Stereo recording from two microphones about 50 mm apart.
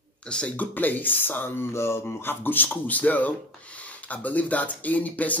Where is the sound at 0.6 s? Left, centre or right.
Left.